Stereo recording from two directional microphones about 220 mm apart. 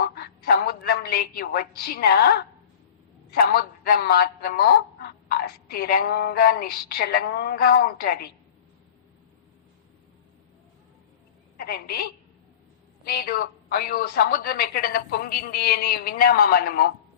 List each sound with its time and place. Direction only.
0.0 s a sound: 45° left (ahead or behind)
3.3 s speech: 45° left (ahead or behind)
11.5 s a woman's voice: 45° left (ahead or behind)
13.1 s speech: 45° left (ahead or behind)